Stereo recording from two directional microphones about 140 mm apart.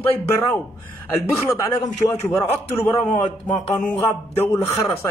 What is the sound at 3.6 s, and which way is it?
Music, 55° left (ahead or behind).